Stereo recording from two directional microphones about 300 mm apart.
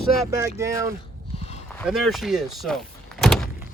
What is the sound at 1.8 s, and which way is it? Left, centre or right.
Speech, centre.